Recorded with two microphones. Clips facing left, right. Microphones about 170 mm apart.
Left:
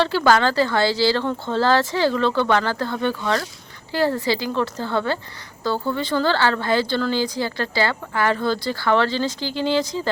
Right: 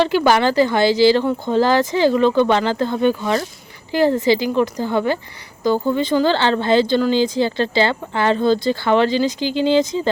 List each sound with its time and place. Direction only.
0.0 s speech: 15° right (ahead or behind)